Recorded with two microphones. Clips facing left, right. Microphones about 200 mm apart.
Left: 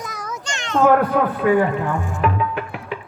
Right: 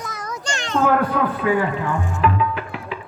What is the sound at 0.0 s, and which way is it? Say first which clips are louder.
Children playing: even; 10° left (ahead or behind).